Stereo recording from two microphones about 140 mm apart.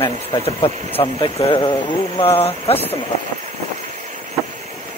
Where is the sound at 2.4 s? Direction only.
45° left (ahead or behind).